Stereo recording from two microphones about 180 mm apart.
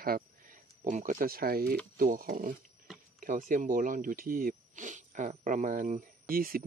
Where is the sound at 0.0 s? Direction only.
50° right (ahead or behind).